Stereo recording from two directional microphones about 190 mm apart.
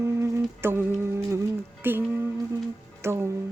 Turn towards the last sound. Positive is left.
turn(degrees=-15)  # may be behind; listen again after turning